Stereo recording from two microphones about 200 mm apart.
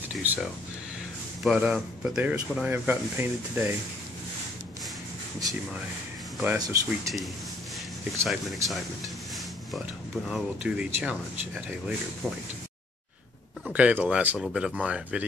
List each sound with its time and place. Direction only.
0.2 s a sound: 10° right (ahead or behind)
1.4 s speech: centre (ahead or behind)
6.4 s speech: 10° right (ahead or behind)
8.3 s speech: centre (ahead or behind)
10.2 s speech: 5° right (ahead or behind)
13.7 s speech: 5° right (ahead or behind)